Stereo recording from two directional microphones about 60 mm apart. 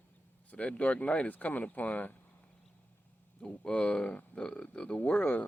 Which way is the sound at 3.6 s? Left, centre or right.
Centre.